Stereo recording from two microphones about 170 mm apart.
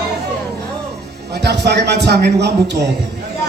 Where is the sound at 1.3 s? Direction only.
75° right (ahead or behind).